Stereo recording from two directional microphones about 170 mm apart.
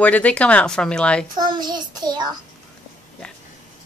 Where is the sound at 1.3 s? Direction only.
25° right (ahead or behind).